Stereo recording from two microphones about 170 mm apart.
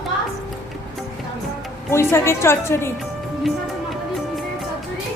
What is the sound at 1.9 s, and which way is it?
A woman's voice, 15° left (ahead or behind).